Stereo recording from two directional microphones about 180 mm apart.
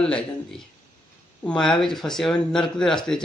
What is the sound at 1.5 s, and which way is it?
Speech, 5° left (ahead or behind).